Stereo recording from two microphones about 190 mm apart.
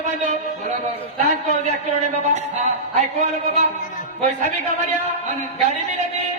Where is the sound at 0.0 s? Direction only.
40° right (ahead or behind).